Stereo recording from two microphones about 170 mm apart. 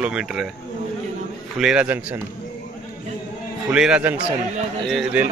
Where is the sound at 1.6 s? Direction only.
5° right (ahead or behind).